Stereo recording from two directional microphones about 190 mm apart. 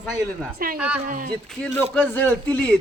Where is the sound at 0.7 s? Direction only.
5° right (ahead or behind).